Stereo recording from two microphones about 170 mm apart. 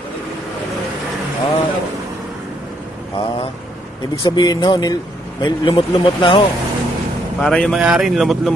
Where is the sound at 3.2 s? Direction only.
30° left (ahead or behind).